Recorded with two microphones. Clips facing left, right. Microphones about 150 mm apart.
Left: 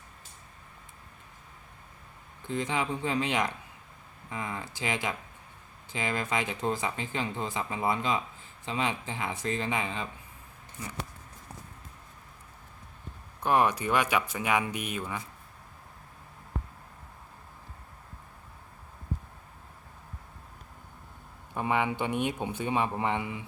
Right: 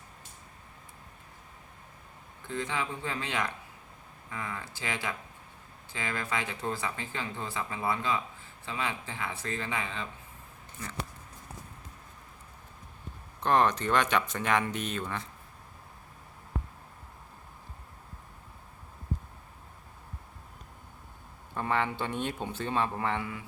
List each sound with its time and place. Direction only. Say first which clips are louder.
2.5 s speech: left 3 dB; 20° left (ahead or behind)
13.4 s speech: even; 10° left (ahead or behind)
21.5 s speech: left 2 dB; 15° left (ahead or behind)